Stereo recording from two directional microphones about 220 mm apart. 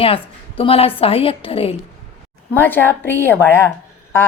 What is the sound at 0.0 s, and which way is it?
A woman's voice, 25° left (ahead or behind).